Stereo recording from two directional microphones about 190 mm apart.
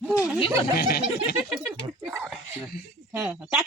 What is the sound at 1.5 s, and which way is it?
Speech, 5° right (ahead or behind).